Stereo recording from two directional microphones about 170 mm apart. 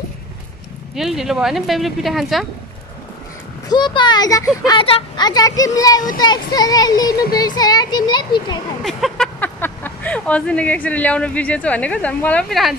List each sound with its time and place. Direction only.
0.9 s speech: centre (ahead or behind)
3.6 s speech: 25° left (ahead or behind)
8.8 s speech: centre (ahead or behind)